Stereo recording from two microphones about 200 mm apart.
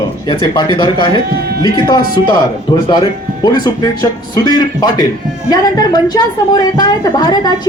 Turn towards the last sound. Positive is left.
turn(degrees=20)  # may be behind; listen again after turning